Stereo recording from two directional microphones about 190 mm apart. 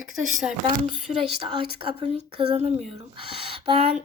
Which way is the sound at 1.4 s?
30° right (ahead or behind).